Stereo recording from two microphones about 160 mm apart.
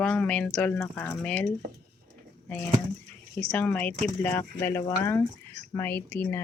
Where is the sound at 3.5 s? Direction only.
10° left (ahead or behind).